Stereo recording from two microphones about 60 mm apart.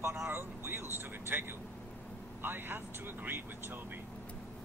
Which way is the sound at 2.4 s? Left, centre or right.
Right.